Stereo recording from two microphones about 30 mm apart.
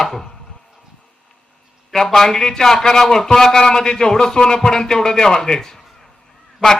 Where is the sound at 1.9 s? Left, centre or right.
Centre.